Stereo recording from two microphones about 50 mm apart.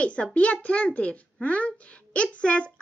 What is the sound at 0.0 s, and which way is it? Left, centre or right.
A child's voice, left.